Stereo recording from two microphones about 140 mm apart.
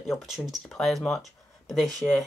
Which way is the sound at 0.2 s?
Centre (ahead or behind).